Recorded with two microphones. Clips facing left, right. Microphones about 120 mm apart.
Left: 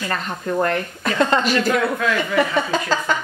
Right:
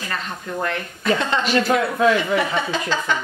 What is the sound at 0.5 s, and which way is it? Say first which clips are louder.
Speech: left 7 dB; 45° left (ahead or behind).